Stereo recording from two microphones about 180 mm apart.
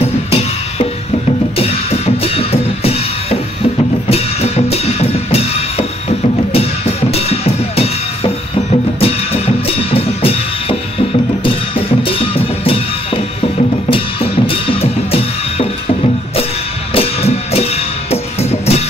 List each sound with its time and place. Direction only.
0.0 s music: 35° left (ahead or behind)
16.9 s music: 35° left (ahead or behind)